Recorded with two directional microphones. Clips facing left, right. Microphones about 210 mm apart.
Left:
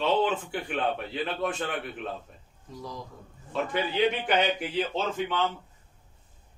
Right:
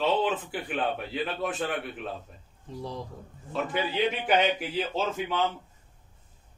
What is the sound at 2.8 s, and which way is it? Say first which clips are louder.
Speech: right 3 dB; 30° right (ahead or behind).